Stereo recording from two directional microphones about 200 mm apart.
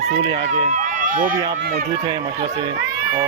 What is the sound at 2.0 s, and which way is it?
Speech, 20° right (ahead or behind).